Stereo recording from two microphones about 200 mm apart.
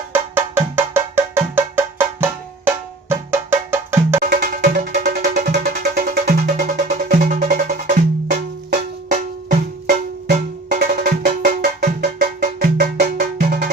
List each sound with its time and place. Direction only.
0.1 s music: 10° right (ahead or behind)
4.2 s music: 45° right (ahead or behind)